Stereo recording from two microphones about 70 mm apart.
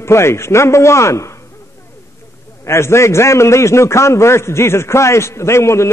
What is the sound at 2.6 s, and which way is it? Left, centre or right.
A man's voice, left.